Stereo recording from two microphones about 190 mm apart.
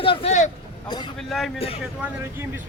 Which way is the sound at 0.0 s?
30° left (ahead or behind).